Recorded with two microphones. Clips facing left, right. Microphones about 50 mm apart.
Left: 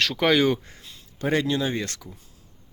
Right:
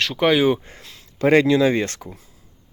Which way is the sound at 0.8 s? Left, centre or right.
Right.